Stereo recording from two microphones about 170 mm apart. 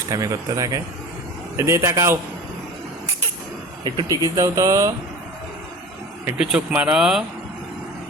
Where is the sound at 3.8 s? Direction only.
25° right (ahead or behind).